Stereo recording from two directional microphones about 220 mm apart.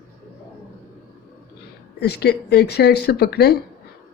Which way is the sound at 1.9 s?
50° left (ahead or behind).